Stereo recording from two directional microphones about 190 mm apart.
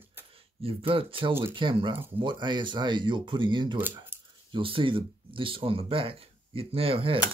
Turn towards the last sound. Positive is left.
turn(degrees=-30)  # may be behind; listen again after turning